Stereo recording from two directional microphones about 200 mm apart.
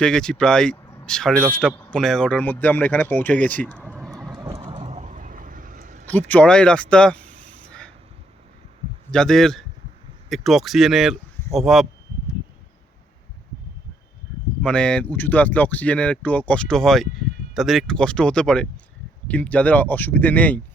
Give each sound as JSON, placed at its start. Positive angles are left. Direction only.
{"t": 0.0, "sound": "speech", "side_deg": 5}
{"t": 3.9, "sound": "vehicle", "side_deg": 0}
{"t": 4.3, "sound": "vehicle", "side_deg": -15}
{"t": 4.7, "sound": "vehicle", "side_deg": -35}
{"t": 6.1, "sound": "speech", "side_deg": 10}
{"t": 9.1, "sound": "speech", "side_deg": 5}
{"t": 14.6, "sound": "speech", "side_deg": 5}